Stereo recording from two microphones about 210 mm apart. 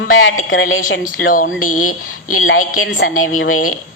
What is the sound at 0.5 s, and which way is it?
Speech, 70° left (ahead or behind).